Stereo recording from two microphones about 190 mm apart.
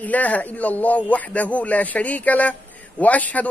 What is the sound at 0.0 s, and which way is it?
Speech, 10° left (ahead or behind).